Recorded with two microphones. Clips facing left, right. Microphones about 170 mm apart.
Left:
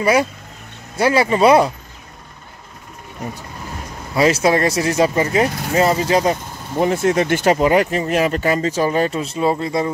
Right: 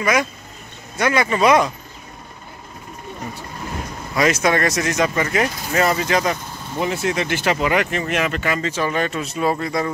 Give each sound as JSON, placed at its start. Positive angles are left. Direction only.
{"t": 0.0, "sound": "speech", "side_deg": 30}
{"t": 4.1, "sound": "speech", "side_deg": 30}
{"t": 6.8, "sound": "speech", "side_deg": 45}